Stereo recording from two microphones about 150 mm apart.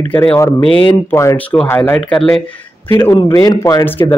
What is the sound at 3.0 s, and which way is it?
Speech, 25° left (ahead or behind).